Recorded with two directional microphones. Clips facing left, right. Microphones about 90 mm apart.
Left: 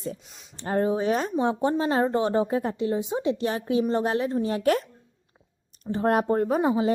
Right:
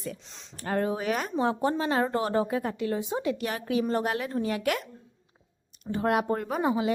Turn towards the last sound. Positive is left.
turn(degrees=30)  # may be behind; listen again after turning